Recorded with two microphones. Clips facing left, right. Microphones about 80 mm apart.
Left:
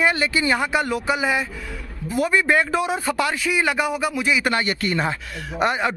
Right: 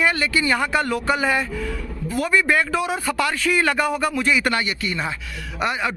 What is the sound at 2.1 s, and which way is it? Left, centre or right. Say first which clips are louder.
Speech: left 1 dB; left.